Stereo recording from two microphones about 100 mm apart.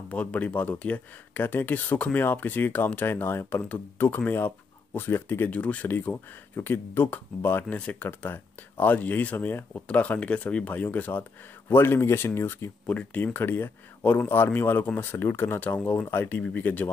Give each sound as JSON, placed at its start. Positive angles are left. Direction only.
{"t": 0.1, "sound": "speech", "side_deg": 15}
{"t": 12.8, "sound": "speech", "side_deg": 15}